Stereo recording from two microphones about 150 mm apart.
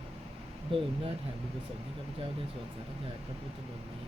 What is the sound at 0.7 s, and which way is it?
Speech, 40° right (ahead or behind).